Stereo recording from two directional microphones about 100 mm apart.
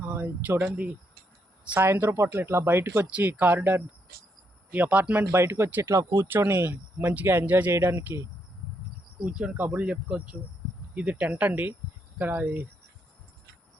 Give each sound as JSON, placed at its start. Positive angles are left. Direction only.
{"t": 0.0, "sound": "speech", "side_deg": -15}
{"t": 1.6, "sound": "speech", "side_deg": -15}
{"t": 5.3, "sound": "speech", "side_deg": -25}
{"t": 9.2, "sound": "speech", "side_deg": -10}